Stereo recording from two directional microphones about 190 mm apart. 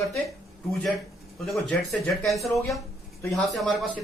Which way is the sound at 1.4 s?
Centre (ahead or behind).